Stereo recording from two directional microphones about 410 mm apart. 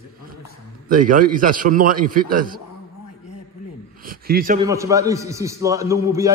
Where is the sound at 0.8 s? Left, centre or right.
Centre.